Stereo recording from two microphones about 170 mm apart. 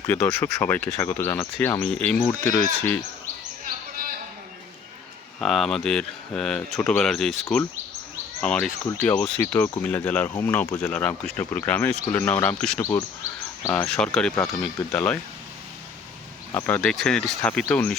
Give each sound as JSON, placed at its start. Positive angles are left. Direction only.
{"t": 0.1, "sound": "speech", "side_deg": 5}
{"t": 1.8, "sound": "speech", "side_deg": 5}
{"t": 5.4, "sound": "speech", "side_deg": 0}
{"t": 12.8, "sound": "speech", "side_deg": 15}
{"t": 16.6, "sound": "speech", "side_deg": 10}